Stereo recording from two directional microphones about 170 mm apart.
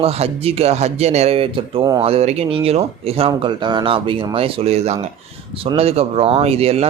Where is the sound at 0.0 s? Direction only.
35° right (ahead or behind).